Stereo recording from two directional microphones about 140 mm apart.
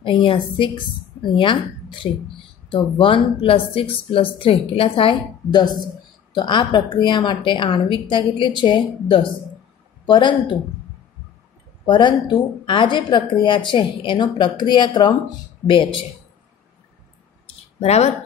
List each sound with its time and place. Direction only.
0.0 s a woman's voice: 35° left (ahead or behind)
11.8 s a woman's voice: 35° left (ahead or behind)
17.7 s speech: 50° left (ahead or behind)